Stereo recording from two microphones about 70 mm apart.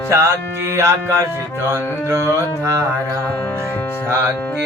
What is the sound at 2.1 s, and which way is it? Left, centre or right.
Music, right.